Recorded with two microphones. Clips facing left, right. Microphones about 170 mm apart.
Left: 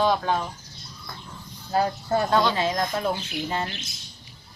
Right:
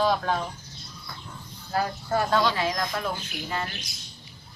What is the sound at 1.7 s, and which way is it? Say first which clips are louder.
A woman's voice: left 3 dB; 25° left (ahead or behind).